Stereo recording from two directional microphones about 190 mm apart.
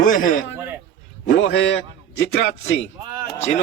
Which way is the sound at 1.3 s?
75° left (ahead or behind).